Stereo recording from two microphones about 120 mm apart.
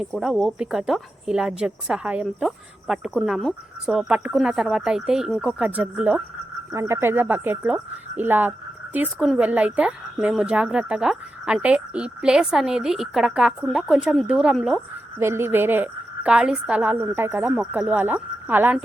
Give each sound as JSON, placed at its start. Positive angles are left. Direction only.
{"t": 0.0, "sound": "a woman's voice", "side_deg": -5}
{"t": 15.2, "sound": "a woman's voice", "side_deg": -20}